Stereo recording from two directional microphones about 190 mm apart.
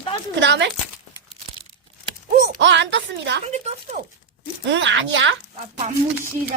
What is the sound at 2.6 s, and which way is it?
Speech, 70° right (ahead or behind).